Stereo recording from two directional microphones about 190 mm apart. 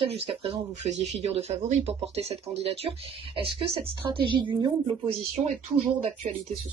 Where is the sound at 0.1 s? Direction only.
35° right (ahead or behind).